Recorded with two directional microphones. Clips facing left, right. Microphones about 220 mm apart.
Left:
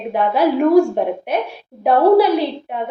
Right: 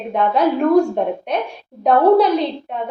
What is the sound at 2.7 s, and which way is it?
Speech, 5° left (ahead or behind).